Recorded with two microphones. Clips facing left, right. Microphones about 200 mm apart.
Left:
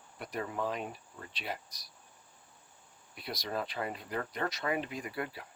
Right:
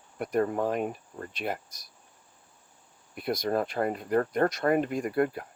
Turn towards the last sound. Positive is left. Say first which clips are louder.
# right 12 dB
turn(degrees=-50)  # may be behind; listen again after turning